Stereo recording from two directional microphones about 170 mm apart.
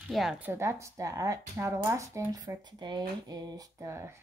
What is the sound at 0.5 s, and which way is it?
Speech, 15° right (ahead or behind).